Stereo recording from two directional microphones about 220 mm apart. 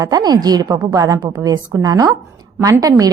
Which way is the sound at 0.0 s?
15° right (ahead or behind).